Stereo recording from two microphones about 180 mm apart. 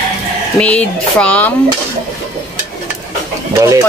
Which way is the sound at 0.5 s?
5° left (ahead or behind).